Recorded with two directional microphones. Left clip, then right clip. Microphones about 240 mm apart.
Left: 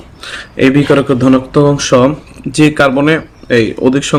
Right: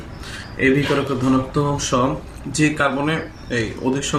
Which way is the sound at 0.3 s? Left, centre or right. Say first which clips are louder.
Left 8 dB; left.